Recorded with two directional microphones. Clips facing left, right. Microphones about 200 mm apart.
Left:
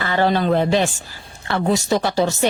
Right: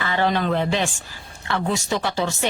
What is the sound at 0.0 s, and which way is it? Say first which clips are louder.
Speech: left 3 dB; 35° left (ahead or behind).